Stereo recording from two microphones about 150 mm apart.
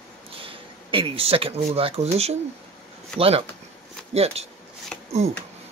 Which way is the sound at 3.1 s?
5° left (ahead or behind).